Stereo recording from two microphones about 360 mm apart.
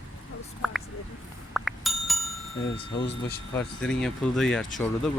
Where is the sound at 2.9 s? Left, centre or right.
Left.